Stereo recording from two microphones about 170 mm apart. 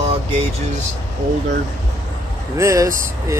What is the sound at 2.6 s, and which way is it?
Speech, 15° right (ahead or behind).